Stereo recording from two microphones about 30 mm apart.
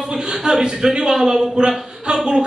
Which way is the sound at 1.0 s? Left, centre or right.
Centre.